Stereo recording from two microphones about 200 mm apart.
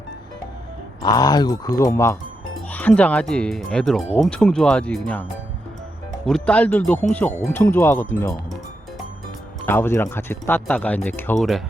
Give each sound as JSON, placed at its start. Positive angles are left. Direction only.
{"t": 1.1, "sound": "speech", "side_deg": 20}
{"t": 6.2, "sound": "speech", "side_deg": 5}
{"t": 9.6, "sound": "speech", "side_deg": 10}